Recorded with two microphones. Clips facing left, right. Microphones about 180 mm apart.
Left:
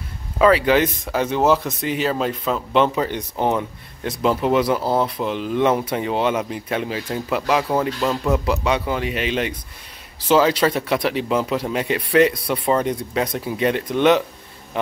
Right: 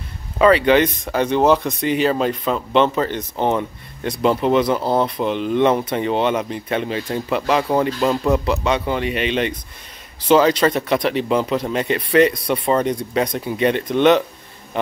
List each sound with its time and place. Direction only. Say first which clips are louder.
0.4 s speech: right 2 dB; 5° left (ahead or behind)
8.3 s speech: right 2 dB; 5° left (ahead or behind)